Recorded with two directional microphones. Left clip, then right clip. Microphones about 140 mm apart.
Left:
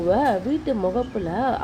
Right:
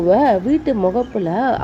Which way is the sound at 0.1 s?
45° right (ahead or behind).